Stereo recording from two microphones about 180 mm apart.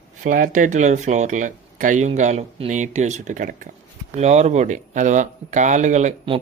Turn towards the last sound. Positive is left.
turn(degrees=-40)  # may be behind; listen again after turning